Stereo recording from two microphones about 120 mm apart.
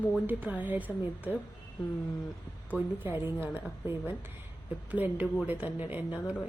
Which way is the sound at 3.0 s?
20° right (ahead or behind).